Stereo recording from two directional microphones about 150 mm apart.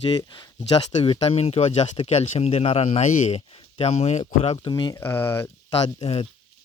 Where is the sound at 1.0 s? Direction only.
40° left (ahead or behind).